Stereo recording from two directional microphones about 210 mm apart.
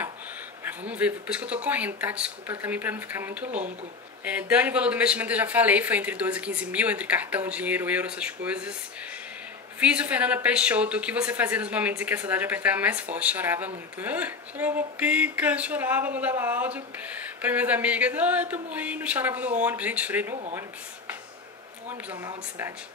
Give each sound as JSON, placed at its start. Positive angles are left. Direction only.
{"t": 0.7, "sound": "speech", "side_deg": -5}
{"t": 9.8, "sound": "speech", "side_deg": -5}
{"t": 22.1, "sound": "speech", "side_deg": -25}